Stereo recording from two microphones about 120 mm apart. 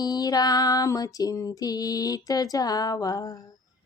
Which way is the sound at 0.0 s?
35° left (ahead or behind).